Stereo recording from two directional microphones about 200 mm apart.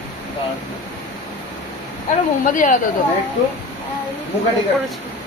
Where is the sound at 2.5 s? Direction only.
40° left (ahead or behind).